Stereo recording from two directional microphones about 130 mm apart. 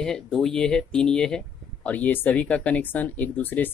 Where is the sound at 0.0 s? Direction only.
5° left (ahead or behind).